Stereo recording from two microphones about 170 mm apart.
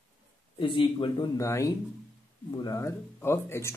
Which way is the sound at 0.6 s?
30° left (ahead or behind).